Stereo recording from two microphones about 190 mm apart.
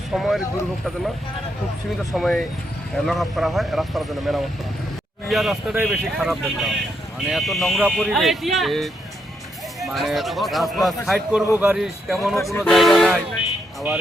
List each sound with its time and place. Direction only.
0.1 s speech: centre (ahead or behind)
2.1 s speech: centre (ahead or behind)
12.4 s speech: 15° left (ahead or behind)
12.6 s speech: centre (ahead or behind)